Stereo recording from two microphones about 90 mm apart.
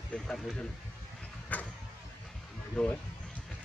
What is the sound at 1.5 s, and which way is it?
Vehicle, 20° left (ahead or behind).